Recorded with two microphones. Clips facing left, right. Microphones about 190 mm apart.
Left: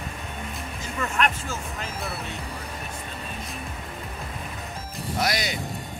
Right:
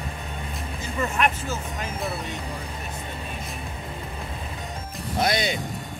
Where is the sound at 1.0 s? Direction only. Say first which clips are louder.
Right 1 dB; 15° right (ahead or behind).